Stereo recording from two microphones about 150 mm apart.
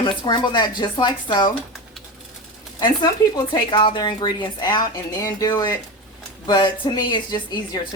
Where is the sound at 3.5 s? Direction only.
30° left (ahead or behind).